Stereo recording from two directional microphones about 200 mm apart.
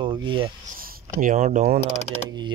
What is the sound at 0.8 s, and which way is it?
Speech, 45° right (ahead or behind).